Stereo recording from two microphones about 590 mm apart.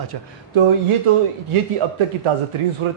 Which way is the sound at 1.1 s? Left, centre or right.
Right.